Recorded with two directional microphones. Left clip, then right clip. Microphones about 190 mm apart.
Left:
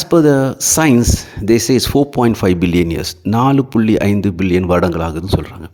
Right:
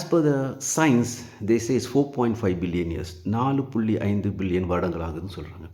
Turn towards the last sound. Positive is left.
turn(degrees=55)  # may be behind; listen again after turning